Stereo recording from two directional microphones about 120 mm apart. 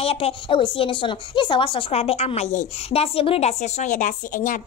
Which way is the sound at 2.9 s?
50° left (ahead or behind).